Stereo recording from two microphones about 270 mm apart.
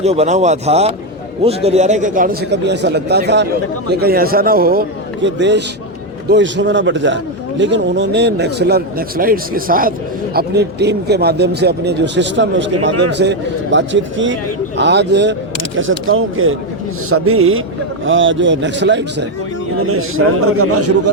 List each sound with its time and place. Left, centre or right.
0.0 s a man's voice: right
19.9 s a man's voice: right